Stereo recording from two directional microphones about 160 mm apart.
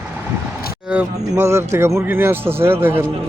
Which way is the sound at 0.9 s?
10° right (ahead or behind).